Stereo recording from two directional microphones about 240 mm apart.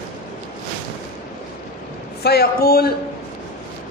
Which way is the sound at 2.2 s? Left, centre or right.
Left.